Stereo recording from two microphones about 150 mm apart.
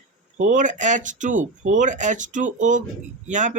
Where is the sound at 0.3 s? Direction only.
55° right (ahead or behind).